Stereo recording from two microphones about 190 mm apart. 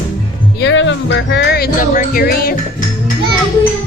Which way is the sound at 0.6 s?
75° left (ahead or behind).